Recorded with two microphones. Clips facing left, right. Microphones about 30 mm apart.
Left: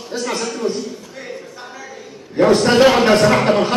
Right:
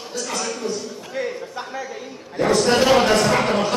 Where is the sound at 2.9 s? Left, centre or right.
Left.